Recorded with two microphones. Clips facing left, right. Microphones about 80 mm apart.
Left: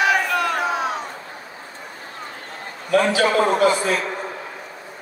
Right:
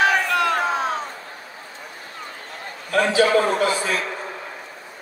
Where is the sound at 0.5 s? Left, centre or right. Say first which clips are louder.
Right 1 dB; right.